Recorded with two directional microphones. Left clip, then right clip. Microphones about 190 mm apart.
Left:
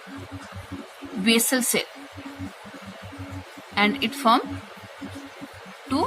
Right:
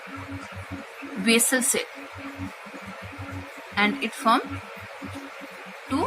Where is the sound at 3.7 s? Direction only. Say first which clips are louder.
Left 2 dB; 25° left (ahead or behind).